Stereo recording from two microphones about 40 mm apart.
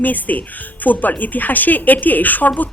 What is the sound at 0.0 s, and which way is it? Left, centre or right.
Speech, left.